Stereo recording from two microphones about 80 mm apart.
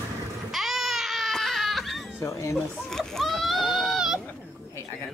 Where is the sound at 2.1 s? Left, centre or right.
Left.